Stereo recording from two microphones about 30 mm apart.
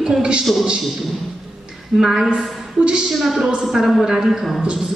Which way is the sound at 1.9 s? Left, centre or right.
Centre.